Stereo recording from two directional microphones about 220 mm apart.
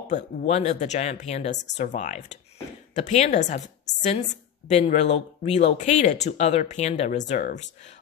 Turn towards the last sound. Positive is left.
turn(degrees=35)  # may be behind; listen again after turning